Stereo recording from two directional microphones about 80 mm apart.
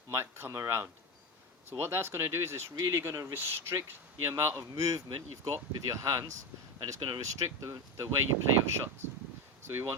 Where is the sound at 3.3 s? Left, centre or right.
Right.